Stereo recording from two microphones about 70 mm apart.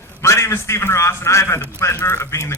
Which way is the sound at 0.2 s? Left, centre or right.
Left.